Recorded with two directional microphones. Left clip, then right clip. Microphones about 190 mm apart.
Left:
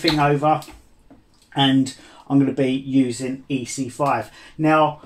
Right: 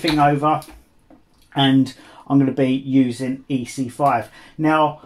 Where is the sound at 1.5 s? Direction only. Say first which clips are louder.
Right 1 dB; 40° right (ahead or behind).